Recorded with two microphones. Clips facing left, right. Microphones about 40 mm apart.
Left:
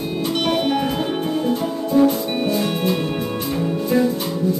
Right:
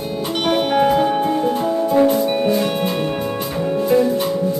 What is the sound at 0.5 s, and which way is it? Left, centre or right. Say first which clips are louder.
Music: right 7 dB; centre.